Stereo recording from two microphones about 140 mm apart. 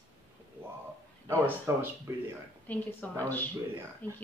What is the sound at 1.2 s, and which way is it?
Speech, 15° right (ahead or behind).